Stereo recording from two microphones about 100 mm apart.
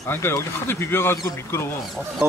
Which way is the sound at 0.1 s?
25° left (ahead or behind).